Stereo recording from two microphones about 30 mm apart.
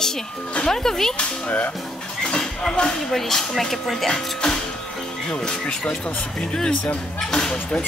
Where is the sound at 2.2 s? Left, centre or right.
Left.